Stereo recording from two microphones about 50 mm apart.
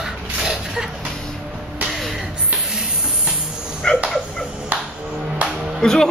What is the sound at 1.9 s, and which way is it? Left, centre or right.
Music, centre.